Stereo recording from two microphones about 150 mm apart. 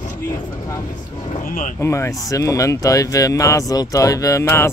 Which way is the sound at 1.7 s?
20° left (ahead or behind).